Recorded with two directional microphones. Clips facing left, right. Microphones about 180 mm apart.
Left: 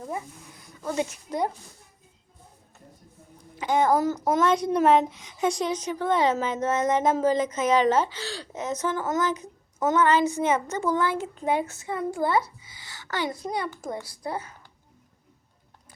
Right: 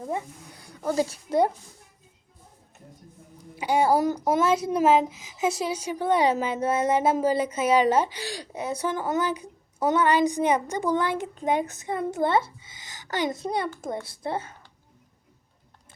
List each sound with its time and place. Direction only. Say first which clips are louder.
0.9 s speech: right 3 dB; 35° right (ahead or behind)
3.5 s a child's voice: even; 10° right (ahead or behind); by 14.5 s 25° right (ahead or behind)